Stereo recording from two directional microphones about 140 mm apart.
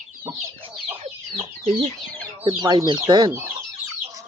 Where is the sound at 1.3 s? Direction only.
45° right (ahead or behind).